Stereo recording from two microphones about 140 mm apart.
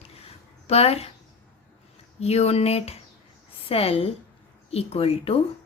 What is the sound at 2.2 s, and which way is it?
A woman's voice, 50° left (ahead or behind).